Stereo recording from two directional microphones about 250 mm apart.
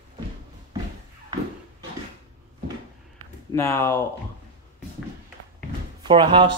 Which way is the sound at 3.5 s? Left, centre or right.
Centre.